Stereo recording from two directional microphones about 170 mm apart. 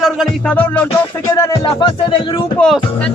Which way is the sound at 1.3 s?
20° left (ahead or behind).